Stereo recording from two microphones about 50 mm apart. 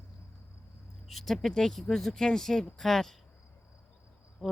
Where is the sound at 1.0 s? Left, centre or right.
Centre.